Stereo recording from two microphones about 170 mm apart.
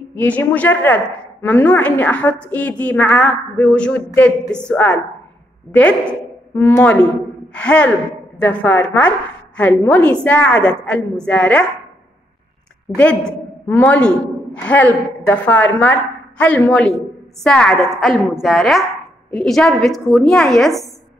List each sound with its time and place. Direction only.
0.1 s a woman's voice: 10° left (ahead or behind)
12.9 s a woman's voice: 5° left (ahead or behind)